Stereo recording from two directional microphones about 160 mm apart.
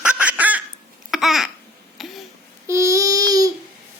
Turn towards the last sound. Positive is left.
turn(degrees=-20)  # may be behind; listen again after turning